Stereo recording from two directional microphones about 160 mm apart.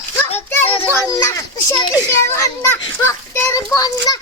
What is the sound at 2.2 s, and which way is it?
Children playing, 20° left (ahead or behind).